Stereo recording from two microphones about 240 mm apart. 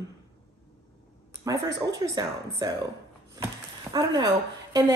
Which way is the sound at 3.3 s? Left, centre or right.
Centre.